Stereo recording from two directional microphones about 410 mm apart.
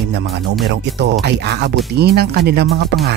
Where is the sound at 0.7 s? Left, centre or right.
Right.